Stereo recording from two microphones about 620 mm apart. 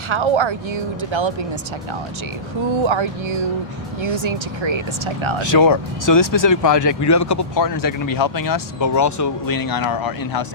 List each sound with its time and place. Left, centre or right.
0.1 s speech: right
2.8 s speech: right
4.1 s speech: right
5.4 s speech: left